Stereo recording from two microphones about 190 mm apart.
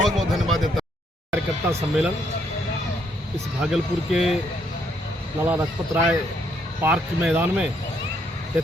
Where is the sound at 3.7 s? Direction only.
Centre (ahead or behind).